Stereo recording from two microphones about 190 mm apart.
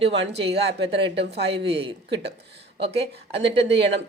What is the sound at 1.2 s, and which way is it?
Speech, 65° right (ahead or behind).